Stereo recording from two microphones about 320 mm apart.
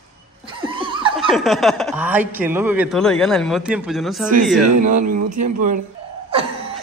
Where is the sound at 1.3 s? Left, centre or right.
Centre.